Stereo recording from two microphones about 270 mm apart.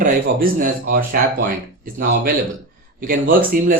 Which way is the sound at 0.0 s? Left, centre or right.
Right.